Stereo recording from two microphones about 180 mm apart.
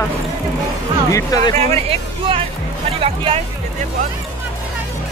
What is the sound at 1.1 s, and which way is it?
Speech, 20° left (ahead or behind).